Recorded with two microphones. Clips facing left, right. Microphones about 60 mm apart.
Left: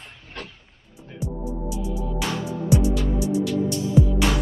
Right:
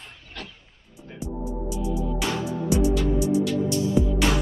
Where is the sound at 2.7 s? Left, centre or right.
Right.